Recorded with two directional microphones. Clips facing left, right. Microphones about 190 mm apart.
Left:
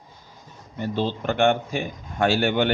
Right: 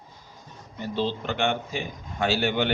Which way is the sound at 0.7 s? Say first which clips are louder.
Left 2 dB; 50° left (ahead or behind).